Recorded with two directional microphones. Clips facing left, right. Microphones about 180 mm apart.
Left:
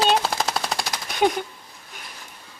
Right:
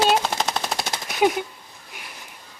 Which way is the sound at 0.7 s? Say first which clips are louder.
Right 1 dB; 25° right (ahead or behind).